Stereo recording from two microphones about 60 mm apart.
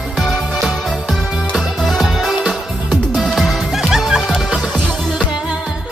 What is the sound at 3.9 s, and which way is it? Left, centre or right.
Music, centre.